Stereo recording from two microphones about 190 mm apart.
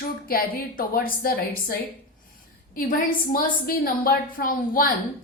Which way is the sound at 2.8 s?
45° left (ahead or behind).